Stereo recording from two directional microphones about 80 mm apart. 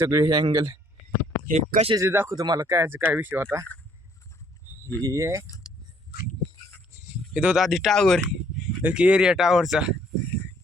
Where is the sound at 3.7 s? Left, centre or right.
Centre.